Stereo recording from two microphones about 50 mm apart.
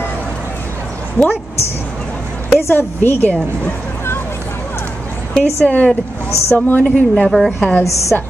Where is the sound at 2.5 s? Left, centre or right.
Left.